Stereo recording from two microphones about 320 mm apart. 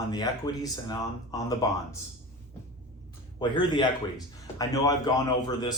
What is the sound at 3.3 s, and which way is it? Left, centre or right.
Speech, centre.